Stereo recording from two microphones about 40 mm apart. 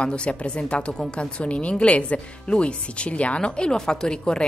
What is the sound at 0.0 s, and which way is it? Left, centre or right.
A woman's voice, left.